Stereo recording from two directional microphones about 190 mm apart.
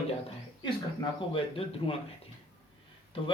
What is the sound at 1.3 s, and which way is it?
Speech, 30° left (ahead or behind).